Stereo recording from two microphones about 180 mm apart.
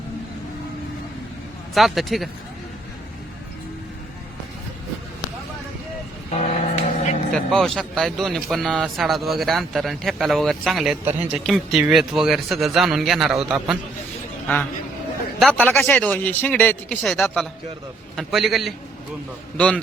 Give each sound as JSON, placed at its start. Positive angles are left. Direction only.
{"t": 1.7, "sound": "a man's voice", "side_deg": 0}
{"t": 6.3, "sound": "vehicle", "side_deg": 40}
{"t": 7.3, "sound": "a man's voice", "side_deg": 5}
{"t": 14.4, "sound": "a man's voice", "side_deg": 10}